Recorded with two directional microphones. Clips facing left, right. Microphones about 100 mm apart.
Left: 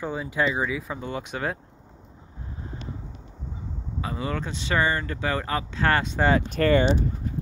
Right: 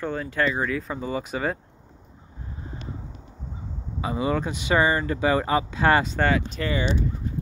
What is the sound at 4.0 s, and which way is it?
Speech, 10° right (ahead or behind).